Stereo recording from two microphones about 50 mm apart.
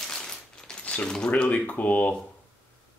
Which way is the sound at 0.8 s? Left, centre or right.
Left.